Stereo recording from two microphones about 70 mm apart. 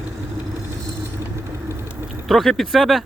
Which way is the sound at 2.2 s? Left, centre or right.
Centre.